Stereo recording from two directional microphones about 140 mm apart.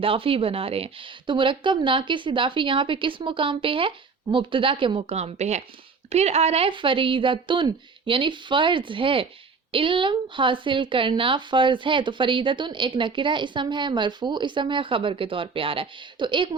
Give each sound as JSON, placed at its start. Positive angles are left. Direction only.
{"t": 0.0, "sound": "a woman's voice", "side_deg": -40}